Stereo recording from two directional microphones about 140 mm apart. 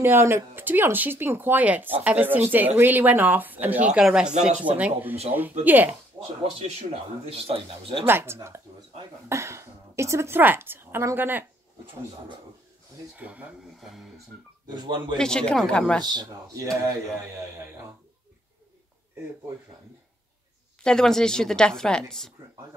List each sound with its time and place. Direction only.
0.0 s speech: 15° right (ahead or behind)
6.2 s a sound: 20° right (ahead or behind)
6.8 s speech: 45° right (ahead or behind)
8.1 s a woman's voice: 15° right (ahead or behind)
13.2 s speech: 10° right (ahead or behind)
14.7 s speech: 35° right (ahead or behind)
15.1 s a woman's voice: 5° left (ahead or behind)
16.0 s speech: 30° right (ahead or behind)
20.8 s a woman's voice: 5° left (ahead or behind)